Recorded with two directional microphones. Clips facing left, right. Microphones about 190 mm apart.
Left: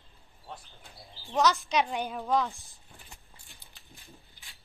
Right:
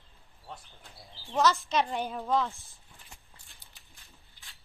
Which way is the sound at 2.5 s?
15° left (ahead or behind).